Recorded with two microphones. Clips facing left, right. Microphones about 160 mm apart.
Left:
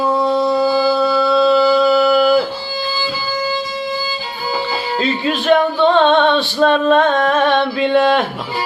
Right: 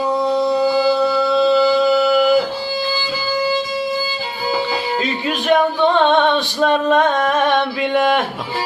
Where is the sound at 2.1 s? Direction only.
20° right (ahead or behind).